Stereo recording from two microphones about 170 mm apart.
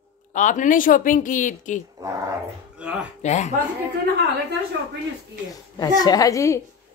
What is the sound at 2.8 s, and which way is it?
Speech, 5° right (ahead or behind).